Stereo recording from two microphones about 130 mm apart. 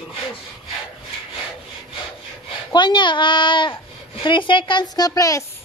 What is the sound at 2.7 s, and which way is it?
Speech, 35° left (ahead or behind).